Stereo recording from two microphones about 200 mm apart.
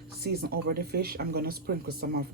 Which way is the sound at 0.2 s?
55° right (ahead or behind).